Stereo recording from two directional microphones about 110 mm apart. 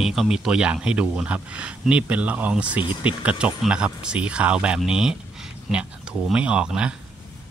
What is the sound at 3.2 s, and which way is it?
A man's voice, 10° right (ahead or behind).